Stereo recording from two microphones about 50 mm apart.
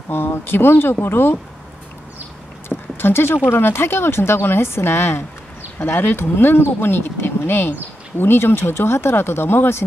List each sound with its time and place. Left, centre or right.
0.1 s a woman's voice: left
3.0 s a woman's voice: left